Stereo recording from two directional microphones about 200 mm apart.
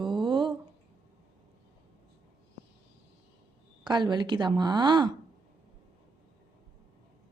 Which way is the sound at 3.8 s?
20° right (ahead or behind).